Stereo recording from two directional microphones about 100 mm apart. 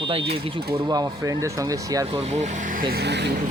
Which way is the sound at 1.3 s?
35° right (ahead or behind).